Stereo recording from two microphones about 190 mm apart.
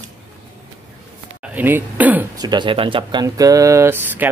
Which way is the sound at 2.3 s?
20° right (ahead or behind).